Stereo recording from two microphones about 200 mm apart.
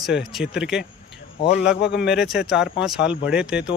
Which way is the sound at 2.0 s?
5° right (ahead or behind).